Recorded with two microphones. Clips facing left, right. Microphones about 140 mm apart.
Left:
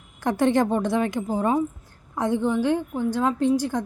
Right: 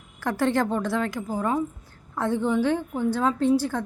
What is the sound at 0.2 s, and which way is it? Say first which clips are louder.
A woman's voice: left 3 dB; 20° left (ahead or behind).